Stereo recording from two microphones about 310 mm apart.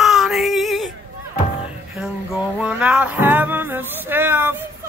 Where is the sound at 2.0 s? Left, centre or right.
Centre.